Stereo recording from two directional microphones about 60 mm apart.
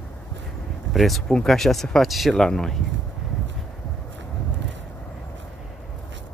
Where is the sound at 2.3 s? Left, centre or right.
Centre.